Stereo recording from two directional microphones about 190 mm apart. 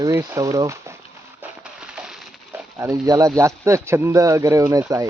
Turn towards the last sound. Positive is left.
turn(degrees=-15)  # may be behind; listen again after turning